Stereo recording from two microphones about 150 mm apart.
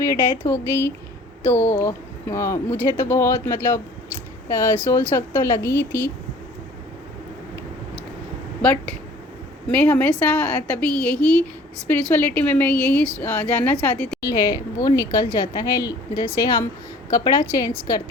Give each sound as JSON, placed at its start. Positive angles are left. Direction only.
{"t": 0.0, "sound": "speech", "side_deg": 20}
{"t": 8.6, "sound": "speech", "side_deg": 10}
{"t": 14.2, "sound": "speech", "side_deg": 25}
{"t": 17.1, "sound": "speech", "side_deg": 20}